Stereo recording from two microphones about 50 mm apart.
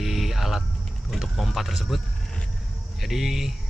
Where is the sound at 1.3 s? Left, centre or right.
Centre.